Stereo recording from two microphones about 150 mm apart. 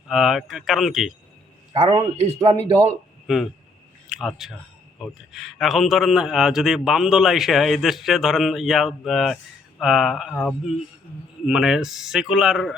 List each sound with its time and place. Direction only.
0.1 s a man's voice: centre (ahead or behind)
1.7 s speech: 35° right (ahead or behind)
3.2 s a man's voice: centre (ahead or behind)